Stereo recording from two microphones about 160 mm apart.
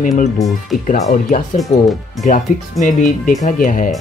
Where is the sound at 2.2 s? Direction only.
50° left (ahead or behind).